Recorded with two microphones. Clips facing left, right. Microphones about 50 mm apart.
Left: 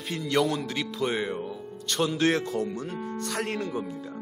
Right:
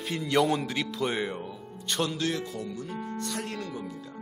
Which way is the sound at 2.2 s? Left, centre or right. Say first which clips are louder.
Left 6 dB; left.